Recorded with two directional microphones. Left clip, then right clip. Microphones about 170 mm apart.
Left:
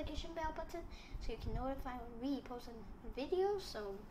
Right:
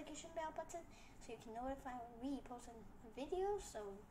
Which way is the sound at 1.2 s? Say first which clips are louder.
Left 4 dB; 10° left (ahead or behind).